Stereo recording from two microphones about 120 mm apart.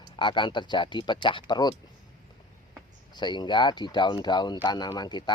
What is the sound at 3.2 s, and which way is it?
Speech, 40° left (ahead or behind).